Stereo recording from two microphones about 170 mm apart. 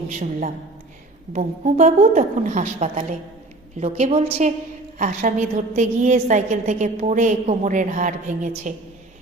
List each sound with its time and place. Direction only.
0.1 s a woman's voice: 50° right (ahead or behind)